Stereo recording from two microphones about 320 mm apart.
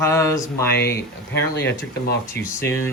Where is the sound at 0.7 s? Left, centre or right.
Left.